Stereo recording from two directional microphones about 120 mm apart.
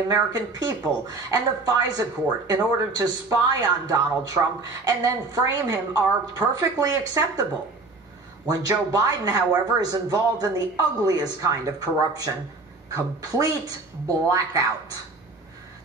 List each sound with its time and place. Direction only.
0.1 s speech: 35° right (ahead or behind)
8.5 s a woman's voice: 30° right (ahead or behind)